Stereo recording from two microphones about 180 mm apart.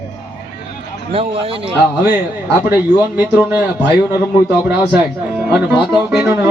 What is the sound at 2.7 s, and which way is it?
Speech, 10° right (ahead or behind).